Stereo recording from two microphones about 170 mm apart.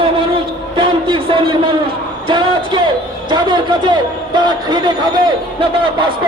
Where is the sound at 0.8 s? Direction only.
30° right (ahead or behind).